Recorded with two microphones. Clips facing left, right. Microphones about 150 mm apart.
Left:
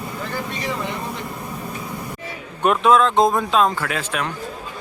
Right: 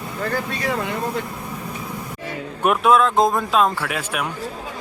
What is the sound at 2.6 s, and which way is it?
Speech, 5° right (ahead or behind).